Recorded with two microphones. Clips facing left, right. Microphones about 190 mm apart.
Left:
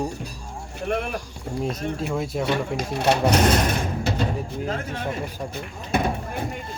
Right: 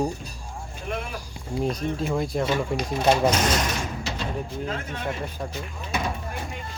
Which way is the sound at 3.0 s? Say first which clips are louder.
Left 1 dB; 60° left (ahead or behind).